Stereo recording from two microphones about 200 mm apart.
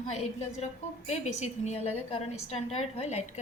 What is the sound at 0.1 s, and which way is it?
A woman's voice, 35° left (ahead or behind).